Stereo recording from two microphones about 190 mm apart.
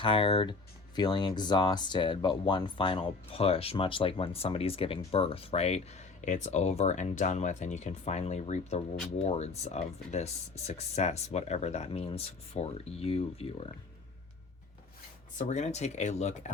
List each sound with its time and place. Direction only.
0.0 s speech: 30° left (ahead or behind)
15.4 s speech: 35° left (ahead or behind)